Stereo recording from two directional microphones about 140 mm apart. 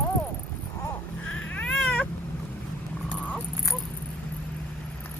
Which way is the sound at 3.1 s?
10° left (ahead or behind).